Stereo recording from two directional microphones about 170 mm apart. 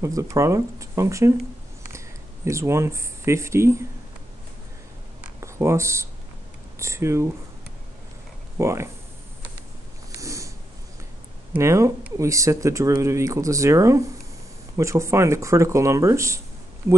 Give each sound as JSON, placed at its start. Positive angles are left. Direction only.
{"t": 0.0, "sound": "speech", "side_deg": -20}
{"t": 5.4, "sound": "speech", "side_deg": -15}
{"t": 8.5, "sound": "speech", "side_deg": -15}
{"t": 10.1, "sound": "snort", "side_deg": -20}
{"t": 11.5, "sound": "speech", "side_deg": -15}